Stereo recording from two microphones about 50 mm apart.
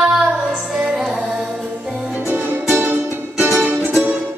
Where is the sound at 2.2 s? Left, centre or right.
Right.